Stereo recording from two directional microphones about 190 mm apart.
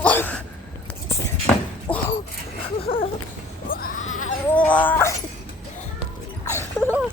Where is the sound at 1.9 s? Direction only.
10° left (ahead or behind).